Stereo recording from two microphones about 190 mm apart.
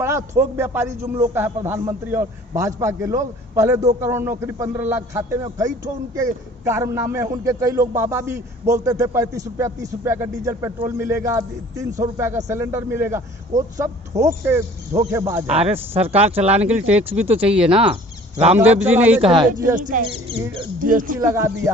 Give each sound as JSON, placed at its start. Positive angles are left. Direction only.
{"t": 0.0, "sound": "a man's voice", "side_deg": -15}
{"t": 15.5, "sound": "speech", "side_deg": -35}
{"t": 16.5, "sound": "a man's voice", "side_deg": -10}
{"t": 19.5, "sound": "speech", "side_deg": -45}
{"t": 21.2, "sound": "a man's voice", "side_deg": -15}